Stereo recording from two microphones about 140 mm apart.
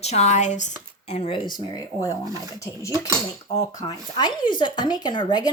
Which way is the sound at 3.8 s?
30° left (ahead or behind).